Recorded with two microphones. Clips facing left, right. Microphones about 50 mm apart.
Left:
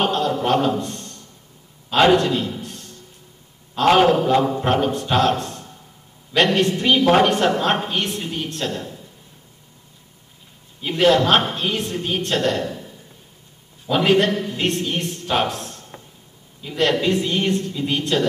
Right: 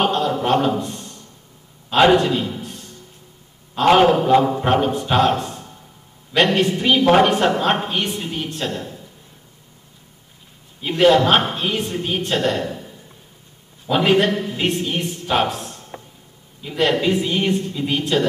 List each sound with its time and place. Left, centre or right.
0.0 s a sound: centre
3.7 s a woman's voice: centre
10.8 s a woman's voice: centre